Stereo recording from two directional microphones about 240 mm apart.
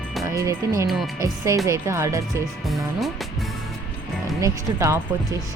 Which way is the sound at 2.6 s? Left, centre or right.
Centre.